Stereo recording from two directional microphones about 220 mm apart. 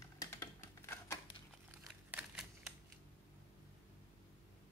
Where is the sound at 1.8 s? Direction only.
5° right (ahead or behind).